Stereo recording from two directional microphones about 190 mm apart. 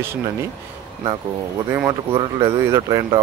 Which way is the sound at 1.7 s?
15° right (ahead or behind).